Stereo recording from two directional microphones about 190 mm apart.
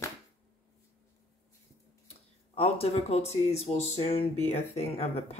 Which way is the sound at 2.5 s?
35° left (ahead or behind).